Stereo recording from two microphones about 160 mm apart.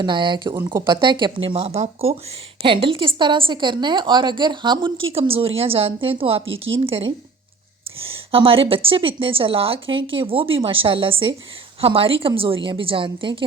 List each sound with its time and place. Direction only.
0.0 s speech: 30° right (ahead or behind)
0.6 s speech: 15° right (ahead or behind)
0.9 s a woman's voice: 30° right (ahead or behind)